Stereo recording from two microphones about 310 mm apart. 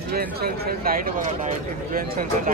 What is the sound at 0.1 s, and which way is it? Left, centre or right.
Speech, right.